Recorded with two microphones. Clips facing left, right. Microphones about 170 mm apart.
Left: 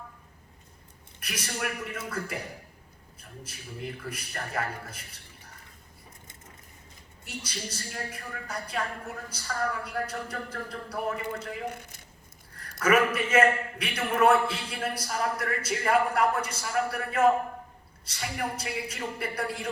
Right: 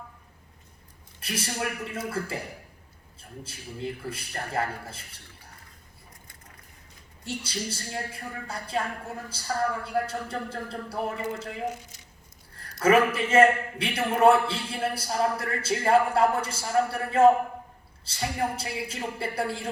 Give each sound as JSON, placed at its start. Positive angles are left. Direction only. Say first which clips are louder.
{"t": 1.2, "sound": "a man's voice", "louder": "right 3 dB", "side_deg": -30}
{"t": 7.3, "sound": "a man's voice", "louder": "right 5 dB", "side_deg": -30}
{"t": 11.7, "sound": "a sound", "louder": "right 2 dB", "side_deg": 55}
{"t": 12.8, "sound": "a man's voice", "louder": "right 3 dB", "side_deg": -30}